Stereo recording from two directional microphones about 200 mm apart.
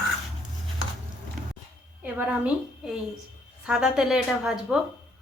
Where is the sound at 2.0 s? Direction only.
5° right (ahead or behind).